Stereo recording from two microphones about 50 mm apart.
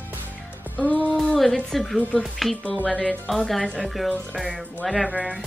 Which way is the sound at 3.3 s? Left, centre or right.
Centre.